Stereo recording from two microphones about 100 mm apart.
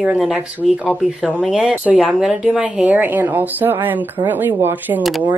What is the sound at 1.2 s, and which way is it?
Speech, 5° right (ahead or behind).